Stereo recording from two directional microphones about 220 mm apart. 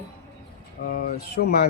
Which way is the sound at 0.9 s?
45° left (ahead or behind).